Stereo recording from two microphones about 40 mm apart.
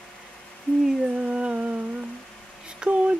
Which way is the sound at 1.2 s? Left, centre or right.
Right.